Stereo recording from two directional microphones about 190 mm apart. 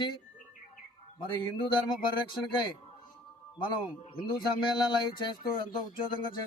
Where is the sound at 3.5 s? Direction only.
25° left (ahead or behind).